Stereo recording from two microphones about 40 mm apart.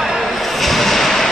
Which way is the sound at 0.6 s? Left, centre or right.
Centre.